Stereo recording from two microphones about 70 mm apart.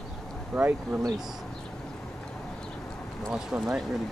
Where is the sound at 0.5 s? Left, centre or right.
Centre.